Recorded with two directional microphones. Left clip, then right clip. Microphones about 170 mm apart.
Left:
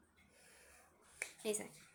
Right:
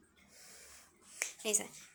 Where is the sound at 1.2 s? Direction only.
5° left (ahead or behind).